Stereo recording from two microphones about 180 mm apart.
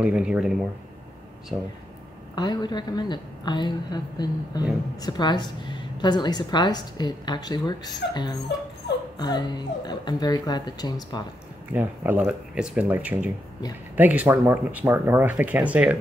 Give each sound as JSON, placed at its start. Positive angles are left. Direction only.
{"t": 0.0, "sound": "speech", "side_deg": -5}
{"t": 1.5, "sound": "speech", "side_deg": -15}
{"t": 2.3, "sound": "a woman's voice", "side_deg": 25}
{"t": 11.7, "sound": "speech", "side_deg": -10}